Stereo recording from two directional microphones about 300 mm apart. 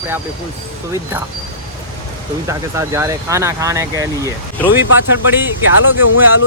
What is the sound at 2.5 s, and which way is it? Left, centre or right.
Speech, centre.